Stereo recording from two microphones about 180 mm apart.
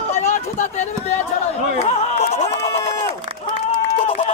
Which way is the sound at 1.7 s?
40° left (ahead or behind).